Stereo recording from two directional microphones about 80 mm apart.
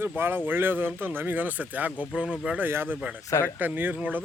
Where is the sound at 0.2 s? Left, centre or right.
Right.